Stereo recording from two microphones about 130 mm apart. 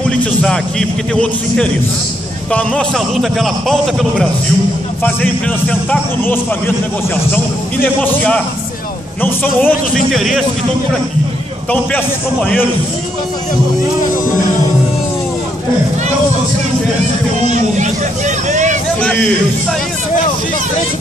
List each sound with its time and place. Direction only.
0.2 s a man's voice: 5° left (ahead or behind)
5.0 s speech: 10° left (ahead or behind)
9.9 s a man's voice: centre (ahead or behind)
17.5 s speech: 65° right (ahead or behind)